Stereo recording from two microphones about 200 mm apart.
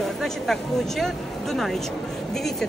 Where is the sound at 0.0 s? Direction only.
Centre (ahead or behind).